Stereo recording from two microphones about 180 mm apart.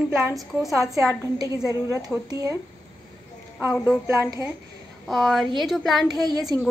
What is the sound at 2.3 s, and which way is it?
Speech, 20° right (ahead or behind).